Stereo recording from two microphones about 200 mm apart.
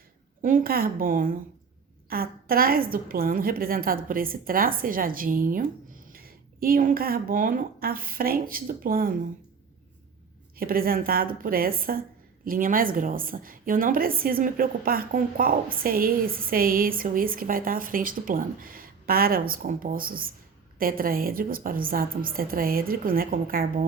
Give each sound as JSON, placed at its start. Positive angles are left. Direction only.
{"t": 0.4, "sound": "a woman's voice", "side_deg": -45}
{"t": 10.6, "sound": "a woman's voice", "side_deg": -45}